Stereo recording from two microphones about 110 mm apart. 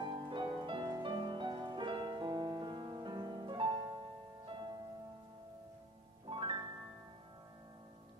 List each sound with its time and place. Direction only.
0.0 s music: 45° right (ahead or behind)
6.2 s music: 45° right (ahead or behind)